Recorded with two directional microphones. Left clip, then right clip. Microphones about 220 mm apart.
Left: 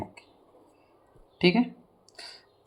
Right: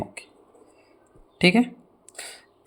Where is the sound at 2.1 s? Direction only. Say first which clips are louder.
Right 4 dB; 30° right (ahead or behind).